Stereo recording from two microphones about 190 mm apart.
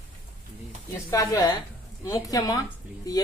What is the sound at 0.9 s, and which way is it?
Speech, 15° left (ahead or behind).